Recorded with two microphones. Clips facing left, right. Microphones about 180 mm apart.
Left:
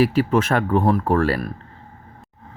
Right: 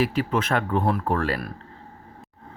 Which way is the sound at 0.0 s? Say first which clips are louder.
Left 6 dB; 45° left (ahead or behind).